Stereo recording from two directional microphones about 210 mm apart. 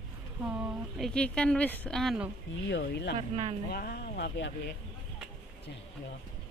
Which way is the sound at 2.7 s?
55° left (ahead or behind).